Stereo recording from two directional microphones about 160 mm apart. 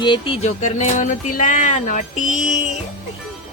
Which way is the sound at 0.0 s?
30° left (ahead or behind).